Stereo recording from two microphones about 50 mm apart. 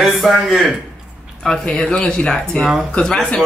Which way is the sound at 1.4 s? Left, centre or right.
Centre.